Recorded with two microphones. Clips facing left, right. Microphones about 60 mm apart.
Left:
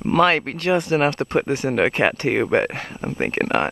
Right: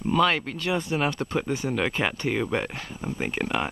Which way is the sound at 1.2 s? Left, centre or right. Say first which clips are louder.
Left 7 dB; left.